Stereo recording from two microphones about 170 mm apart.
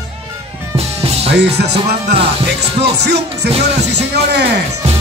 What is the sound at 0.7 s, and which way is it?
Music, 35° right (ahead or behind).